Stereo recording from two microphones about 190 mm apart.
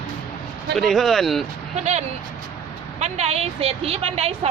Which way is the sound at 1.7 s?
35° right (ahead or behind).